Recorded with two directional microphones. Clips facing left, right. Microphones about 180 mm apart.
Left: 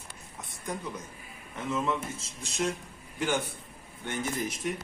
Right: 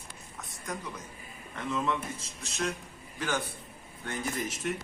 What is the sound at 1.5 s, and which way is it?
A man's voice, 15° left (ahead or behind).